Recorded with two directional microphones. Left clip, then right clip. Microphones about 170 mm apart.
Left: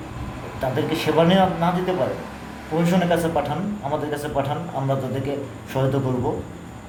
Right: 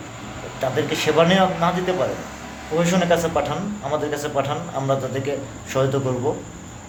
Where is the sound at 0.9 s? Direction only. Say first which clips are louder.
Right 1 dB; 5° right (ahead or behind).